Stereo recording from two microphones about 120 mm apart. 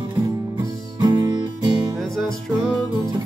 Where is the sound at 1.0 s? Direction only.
35° right (ahead or behind).